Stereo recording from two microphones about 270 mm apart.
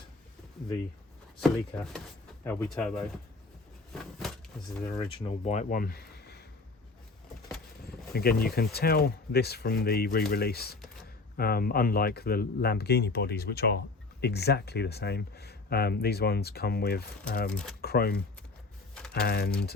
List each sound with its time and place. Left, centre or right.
1.4 s speech: centre
3.9 s a sound: centre
5.5 s speech: left
7.9 s speech: left
17.5 s speech: centre
17.7 s speech: left
19.2 s speech: left